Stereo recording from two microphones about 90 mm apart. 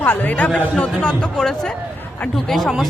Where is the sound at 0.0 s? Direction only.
20° left (ahead or behind).